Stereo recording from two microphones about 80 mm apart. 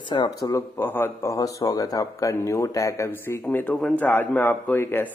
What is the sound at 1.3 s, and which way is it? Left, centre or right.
Speech, left.